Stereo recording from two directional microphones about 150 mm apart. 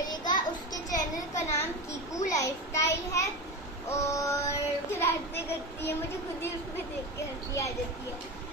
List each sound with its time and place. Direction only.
0.0 s a sound: 25° left (ahead or behind)
2.3 s a child's voice: 20° left (ahead or behind)
3.9 s child singing: 20° left (ahead or behind)